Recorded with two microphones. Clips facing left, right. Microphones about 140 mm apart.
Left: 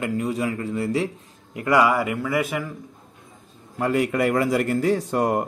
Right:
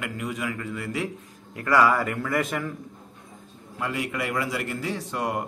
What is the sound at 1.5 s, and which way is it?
A man's voice, 20° left (ahead or behind).